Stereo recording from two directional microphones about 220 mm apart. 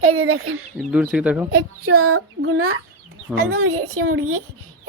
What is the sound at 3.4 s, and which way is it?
Speech, 80° right.